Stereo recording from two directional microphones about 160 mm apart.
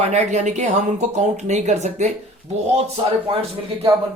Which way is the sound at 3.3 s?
40° right (ahead or behind).